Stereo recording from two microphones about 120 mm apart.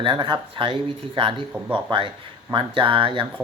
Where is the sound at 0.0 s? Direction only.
45° right (ahead or behind).